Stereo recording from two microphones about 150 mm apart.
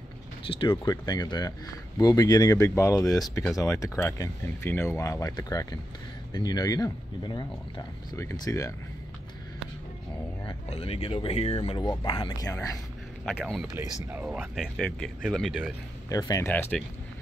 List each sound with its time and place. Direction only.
0.5 s speech: 35° left (ahead or behind)
10.4 s speech: 40° left (ahead or behind)
13.2 s speech: centre (ahead or behind)
16.1 s speech: 25° left (ahead or behind)